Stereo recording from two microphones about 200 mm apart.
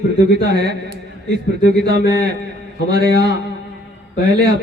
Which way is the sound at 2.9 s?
55° right (ahead or behind).